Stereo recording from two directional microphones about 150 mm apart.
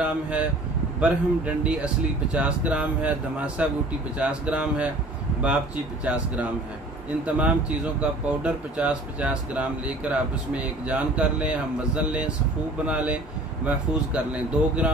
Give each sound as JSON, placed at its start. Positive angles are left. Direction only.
{"t": 0.0, "sound": "speech", "side_deg": -10}
{"t": 6.0, "sound": "speech", "side_deg": -5}